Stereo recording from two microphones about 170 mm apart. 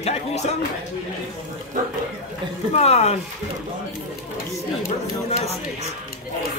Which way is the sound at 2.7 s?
40° left (ahead or behind).